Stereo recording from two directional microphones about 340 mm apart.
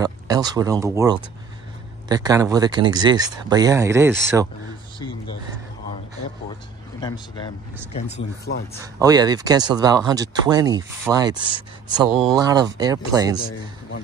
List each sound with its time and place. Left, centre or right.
0.0 s speech: centre
7.0 s speech: centre
8.2 s speech: left
8.8 s speech: centre
13.4 s a sound: left